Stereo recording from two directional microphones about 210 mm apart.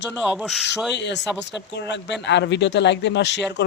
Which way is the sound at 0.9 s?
55° left (ahead or behind).